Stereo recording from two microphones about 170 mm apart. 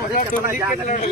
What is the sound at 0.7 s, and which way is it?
Speech, 50° left (ahead or behind).